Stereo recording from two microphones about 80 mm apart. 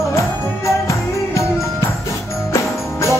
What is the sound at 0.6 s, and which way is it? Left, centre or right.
Music, left.